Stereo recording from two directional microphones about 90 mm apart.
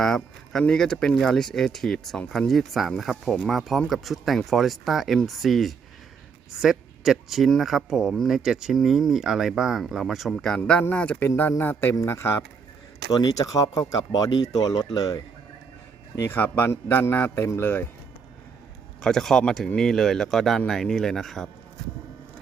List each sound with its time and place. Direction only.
0.0 s speech: 5° left (ahead or behind)
10.9 s a man's voice: 15° left (ahead or behind); by 12.4 s 30° left (ahead or behind)
13.1 s speech: 45° left (ahead or behind)
16.3 s a man's voice: 25° left (ahead or behind)
19.0 s speech: 5° left (ahead or behind)